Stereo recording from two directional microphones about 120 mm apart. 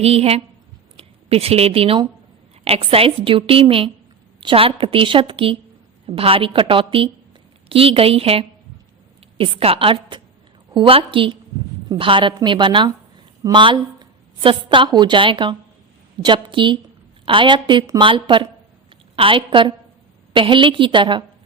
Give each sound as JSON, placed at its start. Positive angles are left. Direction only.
{"t": 0.0, "sound": "a woman's voice", "side_deg": -55}